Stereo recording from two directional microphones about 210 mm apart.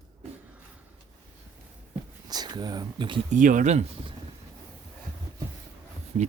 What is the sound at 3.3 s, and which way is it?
Speech, 40° right (ahead or behind).